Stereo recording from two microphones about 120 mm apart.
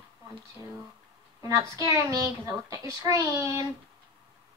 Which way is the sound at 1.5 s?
25° right (ahead or behind).